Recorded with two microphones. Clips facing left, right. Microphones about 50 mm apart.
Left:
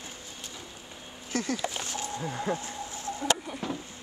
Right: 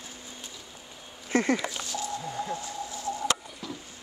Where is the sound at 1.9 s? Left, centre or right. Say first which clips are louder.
Right 1 dB; left.